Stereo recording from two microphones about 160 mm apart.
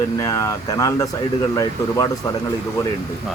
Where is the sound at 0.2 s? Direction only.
20° left (ahead or behind).